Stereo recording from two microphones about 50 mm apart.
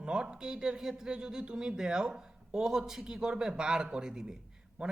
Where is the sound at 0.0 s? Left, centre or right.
Centre.